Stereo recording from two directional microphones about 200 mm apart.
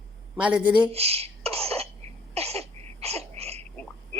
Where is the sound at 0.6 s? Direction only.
25° right (ahead or behind).